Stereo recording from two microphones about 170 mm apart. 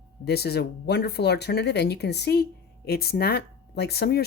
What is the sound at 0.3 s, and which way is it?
Speech, 70° left (ahead or behind).